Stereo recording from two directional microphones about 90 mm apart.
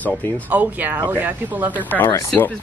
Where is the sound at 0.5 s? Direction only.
15° right (ahead or behind).